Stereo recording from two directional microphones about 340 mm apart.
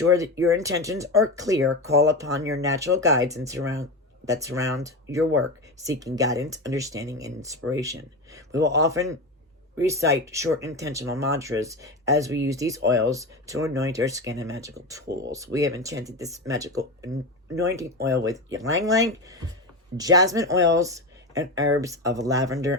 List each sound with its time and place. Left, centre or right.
0.1 s speech: centre
8.7 s speech: centre
15.0 s speech: right
15.3 s speech: centre